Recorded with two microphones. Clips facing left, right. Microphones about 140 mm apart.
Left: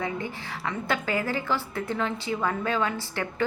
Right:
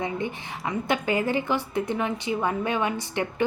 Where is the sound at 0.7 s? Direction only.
20° right (ahead or behind).